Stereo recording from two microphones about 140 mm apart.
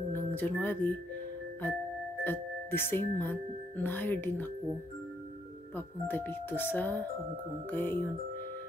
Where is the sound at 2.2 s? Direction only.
15° left (ahead or behind).